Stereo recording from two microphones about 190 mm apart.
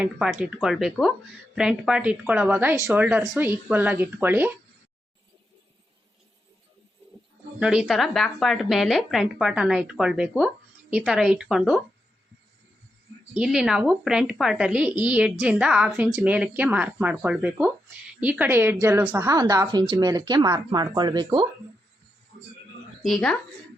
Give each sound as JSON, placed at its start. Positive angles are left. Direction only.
{"t": 0.0, "sound": "a woman's voice", "side_deg": -5}
{"t": 7.6, "sound": "a woman's voice", "side_deg": -5}
{"t": 13.3, "sound": "a woman's voice", "side_deg": -5}
{"t": 23.0, "sound": "a woman's voice", "side_deg": 0}